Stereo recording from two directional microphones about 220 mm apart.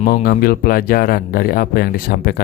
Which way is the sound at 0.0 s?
40° left (ahead or behind).